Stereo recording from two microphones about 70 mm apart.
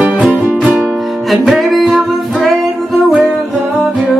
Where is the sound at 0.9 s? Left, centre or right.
Centre.